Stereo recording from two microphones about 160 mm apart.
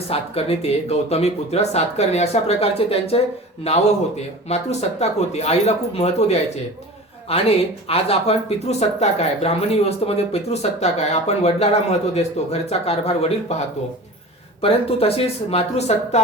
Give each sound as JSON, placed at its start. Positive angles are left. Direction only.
{"t": 0.1, "sound": "speech", "side_deg": 40}